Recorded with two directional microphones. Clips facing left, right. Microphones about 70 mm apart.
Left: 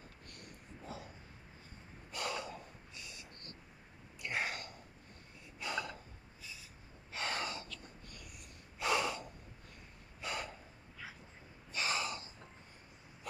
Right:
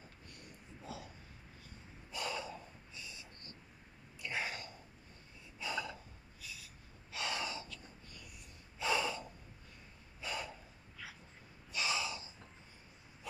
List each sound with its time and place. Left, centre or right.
0.9 s a sound: left
2.0 s snort: left
4.2 s throat clearing: left
5.6 s gasp: left
7.1 s gasp: left
8.1 s snort: left
10.2 s a sound: left
11.7 s gasp: left